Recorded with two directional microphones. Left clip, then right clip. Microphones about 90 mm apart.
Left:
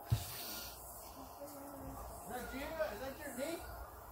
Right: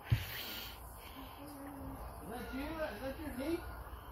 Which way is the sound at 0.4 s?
45° left (ahead or behind).